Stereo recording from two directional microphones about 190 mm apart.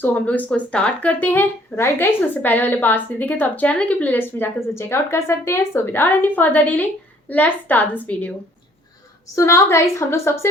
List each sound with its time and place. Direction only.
0.0 s speech: 10° left (ahead or behind)